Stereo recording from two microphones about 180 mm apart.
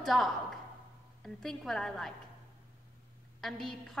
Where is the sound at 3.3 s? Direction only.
Centre (ahead or behind).